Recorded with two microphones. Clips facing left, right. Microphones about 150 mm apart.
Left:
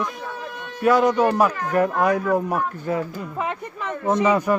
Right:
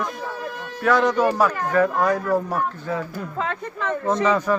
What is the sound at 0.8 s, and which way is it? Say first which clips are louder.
Speech: left 1 dB; 10° left (ahead or behind).